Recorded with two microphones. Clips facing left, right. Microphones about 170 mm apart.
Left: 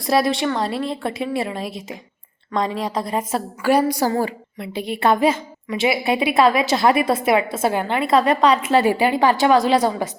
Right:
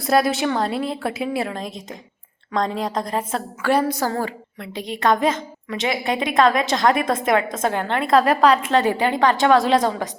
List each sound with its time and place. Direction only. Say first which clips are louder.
0.0 s a woman's voice: even; centre (ahead or behind)